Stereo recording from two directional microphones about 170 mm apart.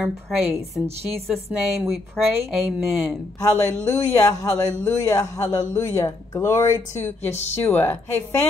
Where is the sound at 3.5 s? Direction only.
15° left (ahead or behind).